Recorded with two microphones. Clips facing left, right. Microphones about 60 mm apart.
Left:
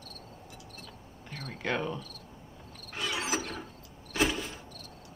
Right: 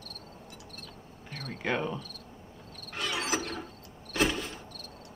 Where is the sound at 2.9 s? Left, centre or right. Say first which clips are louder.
Right 1 dB; centre.